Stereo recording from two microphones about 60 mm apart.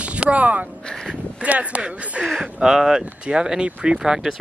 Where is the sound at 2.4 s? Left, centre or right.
Centre.